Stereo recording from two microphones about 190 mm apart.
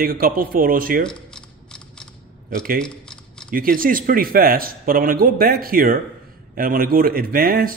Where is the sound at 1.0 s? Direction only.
5° left (ahead or behind).